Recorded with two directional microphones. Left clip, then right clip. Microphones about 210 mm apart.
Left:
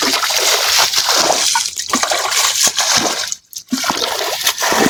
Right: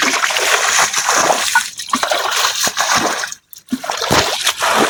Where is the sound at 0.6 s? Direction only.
35° left (ahead or behind).